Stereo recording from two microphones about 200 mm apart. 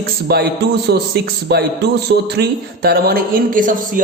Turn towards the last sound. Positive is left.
turn(degrees=-40)  # may be behind; listen again after turning